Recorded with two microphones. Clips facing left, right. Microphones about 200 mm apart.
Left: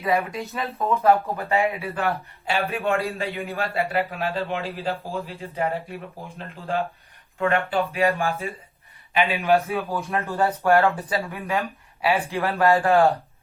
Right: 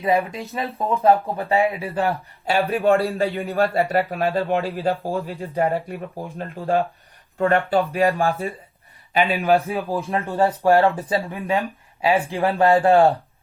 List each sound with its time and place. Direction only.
0.0 s speech: 30° right (ahead or behind)
3.6 s speech: 45° right (ahead or behind)
7.3 s speech: 35° right (ahead or behind)